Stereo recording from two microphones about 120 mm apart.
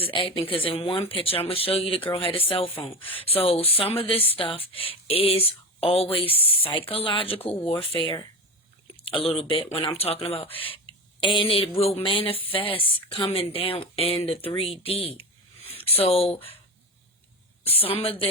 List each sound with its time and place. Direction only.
0.0 s speech: 45° left (ahead or behind)
14.8 s a sound: 50° left (ahead or behind)
16.0 s speech: 55° left (ahead or behind)
17.8 s speech: 55° left (ahead or behind)